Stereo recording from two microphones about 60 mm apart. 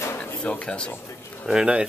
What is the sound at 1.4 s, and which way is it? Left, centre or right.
Speech, centre.